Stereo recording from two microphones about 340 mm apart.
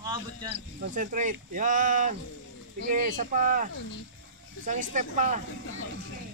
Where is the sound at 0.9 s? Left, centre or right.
Right.